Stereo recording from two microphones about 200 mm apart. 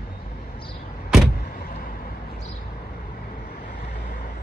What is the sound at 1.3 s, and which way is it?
Vehicle, 50° left (ahead or behind).